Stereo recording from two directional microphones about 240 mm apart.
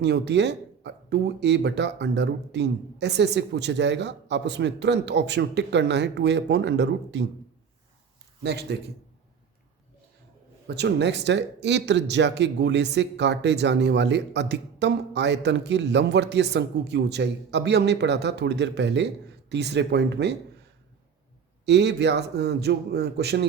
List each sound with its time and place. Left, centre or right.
0.0 s speech: right
8.4 s speech: right
10.7 s speech: right
21.7 s speech: right